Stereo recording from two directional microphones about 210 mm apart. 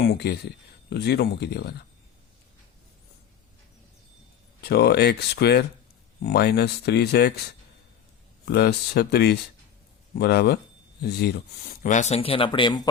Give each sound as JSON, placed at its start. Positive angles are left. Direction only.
{"t": 0.1, "sound": "speech", "side_deg": 50}
{"t": 4.6, "sound": "speech", "side_deg": 50}
{"t": 8.4, "sound": "speech", "side_deg": 50}